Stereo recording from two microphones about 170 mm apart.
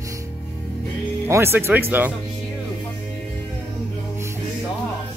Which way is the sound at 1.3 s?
15° right (ahead or behind).